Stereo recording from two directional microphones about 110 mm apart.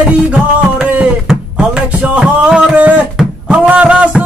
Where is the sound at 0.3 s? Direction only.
10° right (ahead or behind).